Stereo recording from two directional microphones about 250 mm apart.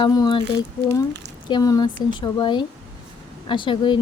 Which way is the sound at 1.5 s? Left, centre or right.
Centre.